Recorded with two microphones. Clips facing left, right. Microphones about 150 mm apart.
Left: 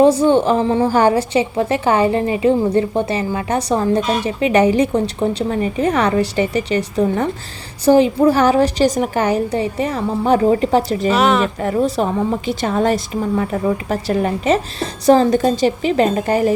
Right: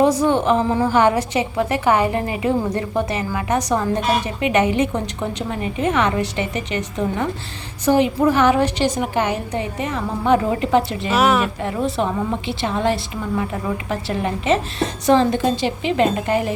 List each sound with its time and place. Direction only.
0.0 s a woman's voice: 30° left (ahead or behind)
11.1 s speech: 5° right (ahead or behind)
11.6 s a woman's voice: 40° left (ahead or behind)